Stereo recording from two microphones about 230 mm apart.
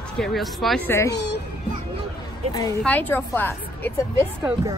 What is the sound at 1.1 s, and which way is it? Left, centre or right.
Speech, left.